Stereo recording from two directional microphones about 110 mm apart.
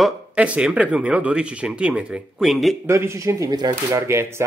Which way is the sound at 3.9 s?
25° right (ahead or behind).